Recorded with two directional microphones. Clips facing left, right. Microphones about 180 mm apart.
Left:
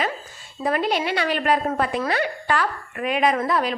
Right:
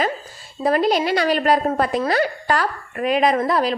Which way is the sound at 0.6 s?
35° right (ahead or behind).